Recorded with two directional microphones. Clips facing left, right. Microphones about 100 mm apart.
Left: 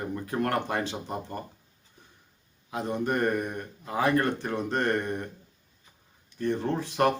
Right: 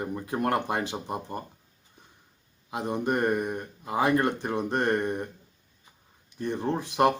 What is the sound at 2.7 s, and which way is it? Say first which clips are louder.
Speech: right 1 dB; 15° right (ahead or behind).